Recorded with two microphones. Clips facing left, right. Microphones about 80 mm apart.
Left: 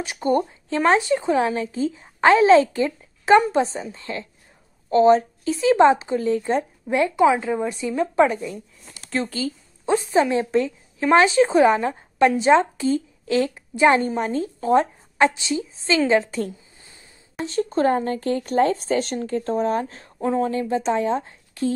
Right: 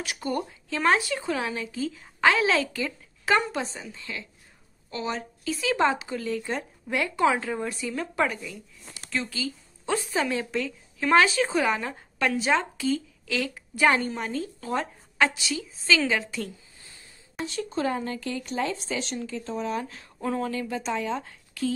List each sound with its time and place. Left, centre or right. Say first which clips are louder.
0.0 s speech: left 8 dB; left
9.8 s a woman's voice: left 8 dB; left